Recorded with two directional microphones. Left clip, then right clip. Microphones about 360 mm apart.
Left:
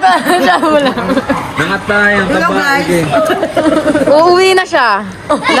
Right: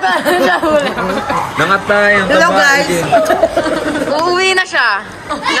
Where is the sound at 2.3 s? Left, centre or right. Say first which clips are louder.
Right 2 dB; centre.